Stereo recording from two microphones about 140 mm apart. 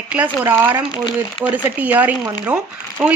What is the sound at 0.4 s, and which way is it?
Speech, 15° right (ahead or behind).